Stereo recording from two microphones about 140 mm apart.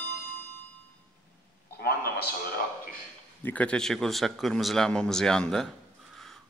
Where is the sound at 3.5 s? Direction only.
10° left (ahead or behind).